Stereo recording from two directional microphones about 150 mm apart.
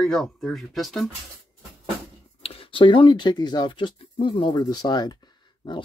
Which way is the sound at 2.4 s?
40° left (ahead or behind).